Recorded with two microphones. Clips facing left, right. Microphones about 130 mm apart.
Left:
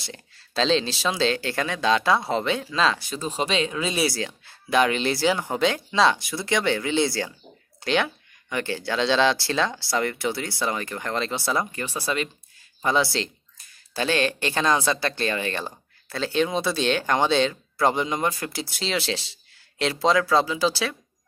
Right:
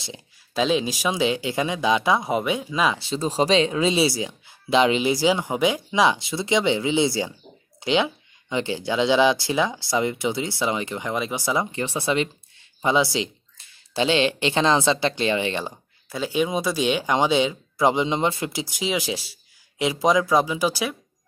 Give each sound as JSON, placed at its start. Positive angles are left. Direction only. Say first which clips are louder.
{"t": 0.0, "sound": "speech", "louder": "right 2 dB", "side_deg": -15}
{"t": 3.0, "sound": "speech", "louder": "right 5 dB", "side_deg": -30}